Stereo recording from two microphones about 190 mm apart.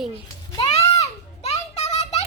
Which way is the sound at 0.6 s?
35° left (ahead or behind).